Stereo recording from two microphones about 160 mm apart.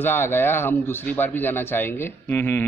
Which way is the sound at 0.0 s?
15° left (ahead or behind).